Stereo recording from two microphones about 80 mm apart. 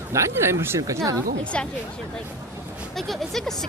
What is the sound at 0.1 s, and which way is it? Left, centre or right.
Speech, right.